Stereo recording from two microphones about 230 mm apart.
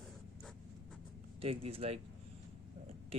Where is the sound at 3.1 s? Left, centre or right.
Right.